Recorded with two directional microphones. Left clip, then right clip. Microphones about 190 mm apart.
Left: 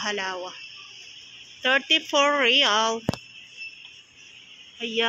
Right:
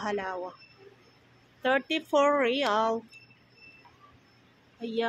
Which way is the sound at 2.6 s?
5° right (ahead or behind).